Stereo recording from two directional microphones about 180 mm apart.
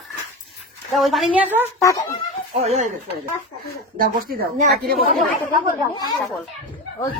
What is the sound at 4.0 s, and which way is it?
Speech, 55° right (ahead or behind).